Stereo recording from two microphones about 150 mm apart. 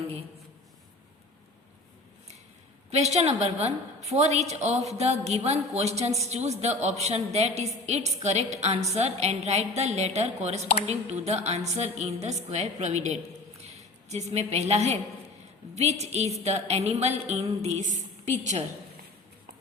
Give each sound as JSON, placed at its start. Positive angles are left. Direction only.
{"t": 2.9, "sound": "a woman's voice", "side_deg": -45}